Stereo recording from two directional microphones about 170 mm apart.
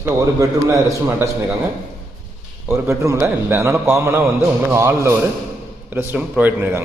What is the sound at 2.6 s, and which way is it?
A man's voice, 15° right (ahead or behind).